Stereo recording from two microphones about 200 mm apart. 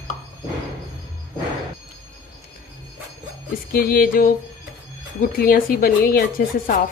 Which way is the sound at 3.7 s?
45° left (ahead or behind).